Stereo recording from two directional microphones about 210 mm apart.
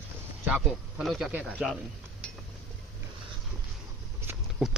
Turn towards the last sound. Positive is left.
turn(degrees=0)  # may be behind; listen again after turning